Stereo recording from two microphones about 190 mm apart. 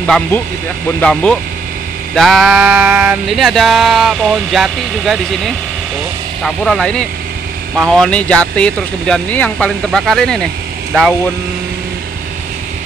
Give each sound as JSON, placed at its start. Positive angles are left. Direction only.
{"t": 0.0, "sound": "speech", "side_deg": 5}
{"t": 2.1, "sound": "speech", "side_deg": 0}